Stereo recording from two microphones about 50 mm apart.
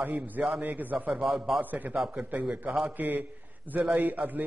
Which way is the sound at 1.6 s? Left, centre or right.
Right.